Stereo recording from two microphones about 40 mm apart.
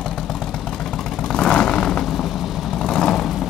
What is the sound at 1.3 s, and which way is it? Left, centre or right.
Vehicle, left.